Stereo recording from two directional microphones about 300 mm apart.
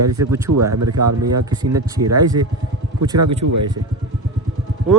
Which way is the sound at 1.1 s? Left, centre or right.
Right.